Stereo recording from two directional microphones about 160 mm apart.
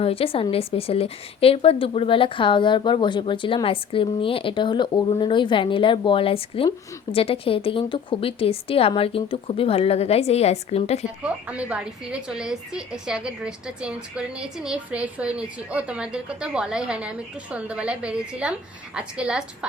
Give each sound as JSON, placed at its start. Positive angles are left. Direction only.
{"t": 0.0, "sound": "speech", "side_deg": 35}
{"t": 11.2, "sound": "a woman's voice", "side_deg": -10}